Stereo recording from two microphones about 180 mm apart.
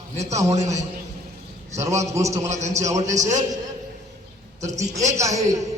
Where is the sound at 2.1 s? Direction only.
15° right (ahead or behind).